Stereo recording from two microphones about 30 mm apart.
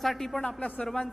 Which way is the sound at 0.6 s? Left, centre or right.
Left.